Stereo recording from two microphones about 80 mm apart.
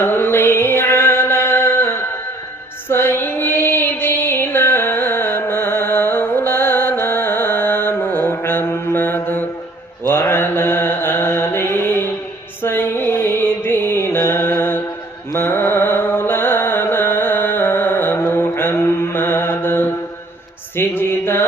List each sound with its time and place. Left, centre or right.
0.0 s mantra: left
2.9 s music: left
10.0 s mantra: left
12.6 s music: left
20.7 s mantra: left